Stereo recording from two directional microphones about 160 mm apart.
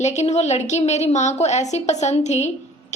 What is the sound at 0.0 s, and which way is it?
A woman's voice, 45° left (ahead or behind).